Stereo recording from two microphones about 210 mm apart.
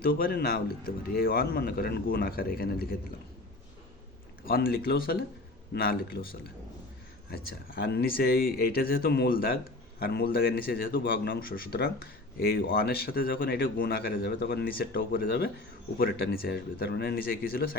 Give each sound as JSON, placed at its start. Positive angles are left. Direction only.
{"t": 0.0, "sound": "speech", "side_deg": 45}
{"t": 4.4, "sound": "speech", "side_deg": 45}
{"t": 7.8, "sound": "speech", "side_deg": 50}